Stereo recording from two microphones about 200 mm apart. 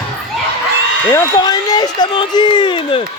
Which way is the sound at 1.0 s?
15° left (ahead or behind).